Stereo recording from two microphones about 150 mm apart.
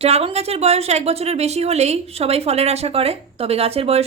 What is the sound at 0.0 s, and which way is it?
A woman's voice, 45° right (ahead or behind).